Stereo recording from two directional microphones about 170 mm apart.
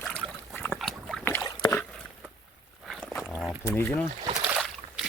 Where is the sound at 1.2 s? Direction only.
15° left (ahead or behind).